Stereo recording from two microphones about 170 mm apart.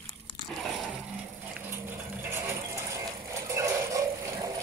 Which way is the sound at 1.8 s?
15° right (ahead or behind).